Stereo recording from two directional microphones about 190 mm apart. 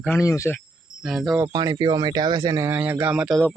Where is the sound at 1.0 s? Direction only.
Centre (ahead or behind).